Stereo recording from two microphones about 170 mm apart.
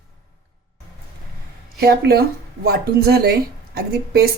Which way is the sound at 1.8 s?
65° right (ahead or behind).